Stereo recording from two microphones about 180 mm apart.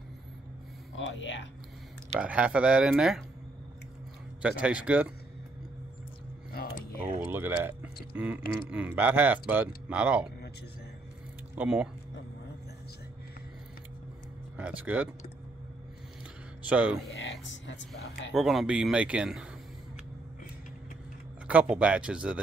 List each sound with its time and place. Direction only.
0.9 s speech: 90° left
2.1 s speech: 5° right (ahead or behind)
4.4 s speech: 5° right (ahead or behind)
6.5 s a sound: 55° left (ahead or behind)
7.0 s speech: 10° right (ahead or behind)
11.5 s speech: 5° right (ahead or behind)
14.6 s speech: 10° right (ahead or behind)
16.6 s speech: 5° right (ahead or behind)
17.1 s speech: 90° left
18.3 s speech: centre (ahead or behind)
21.5 s speech: 5° right (ahead or behind)